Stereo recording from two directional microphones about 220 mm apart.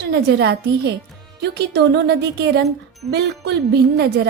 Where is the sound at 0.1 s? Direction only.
50° right (ahead or behind).